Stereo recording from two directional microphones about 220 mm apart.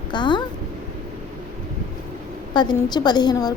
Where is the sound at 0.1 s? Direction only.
20° left (ahead or behind).